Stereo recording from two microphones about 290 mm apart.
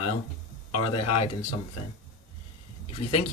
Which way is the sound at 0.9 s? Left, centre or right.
Centre.